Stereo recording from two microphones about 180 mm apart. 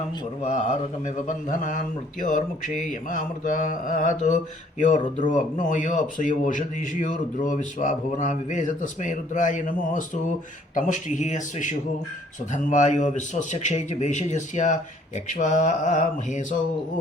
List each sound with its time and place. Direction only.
1.0 s a man's voice: 45° left (ahead or behind)